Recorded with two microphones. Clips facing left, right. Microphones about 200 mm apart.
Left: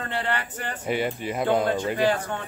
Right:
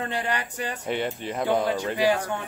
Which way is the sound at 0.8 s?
5° left (ahead or behind).